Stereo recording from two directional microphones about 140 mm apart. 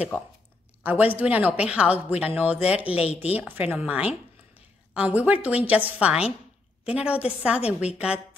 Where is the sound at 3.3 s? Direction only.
10° right (ahead or behind).